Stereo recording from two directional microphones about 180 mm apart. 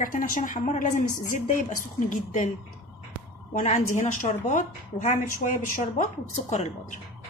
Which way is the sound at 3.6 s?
40° left (ahead or behind).